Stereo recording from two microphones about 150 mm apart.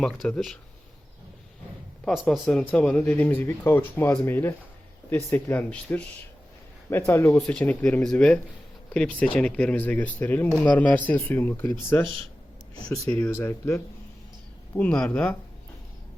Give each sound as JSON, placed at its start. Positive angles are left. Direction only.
{"t": 0.0, "sound": "speech", "side_deg": 5}
{"t": 2.0, "sound": "speech", "side_deg": 0}